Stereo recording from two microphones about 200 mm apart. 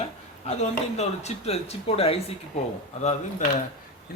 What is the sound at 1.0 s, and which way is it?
Speech, 30° left (ahead or behind).